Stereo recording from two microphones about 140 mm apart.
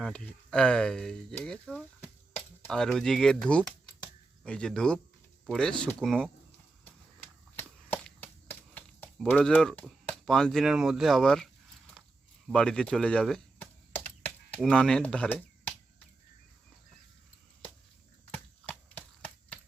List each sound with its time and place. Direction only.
0.0 s speech: 5° left (ahead or behind)
4.4 s speech: 5° left (ahead or behind)
7.9 s a sound: 15° left (ahead or behind)
9.2 s speech: 10° left (ahead or behind)
12.5 s speech: 5° left (ahead or behind)
13.9 s computer keyboard: 15° left (ahead or behind)
14.6 s speech: 5° left (ahead or behind)
18.3 s a sound: 10° left (ahead or behind)